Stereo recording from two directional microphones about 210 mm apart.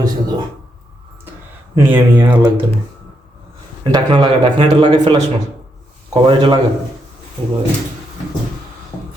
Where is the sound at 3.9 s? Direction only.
20° right (ahead or behind).